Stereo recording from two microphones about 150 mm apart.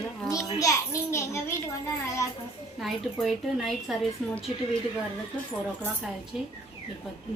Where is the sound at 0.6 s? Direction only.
20° left (ahead or behind).